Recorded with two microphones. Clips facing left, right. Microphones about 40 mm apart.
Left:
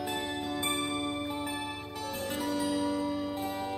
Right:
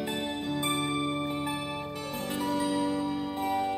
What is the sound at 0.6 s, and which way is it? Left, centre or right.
Music, centre.